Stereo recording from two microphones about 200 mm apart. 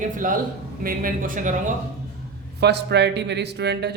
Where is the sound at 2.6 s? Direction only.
55° right (ahead or behind).